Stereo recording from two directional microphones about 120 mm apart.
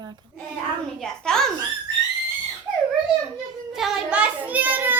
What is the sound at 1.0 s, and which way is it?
Speech, 5° left (ahead or behind).